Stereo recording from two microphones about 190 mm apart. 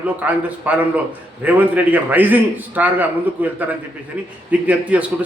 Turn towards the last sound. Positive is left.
turn(degrees=-10)  # may be behind; listen again after turning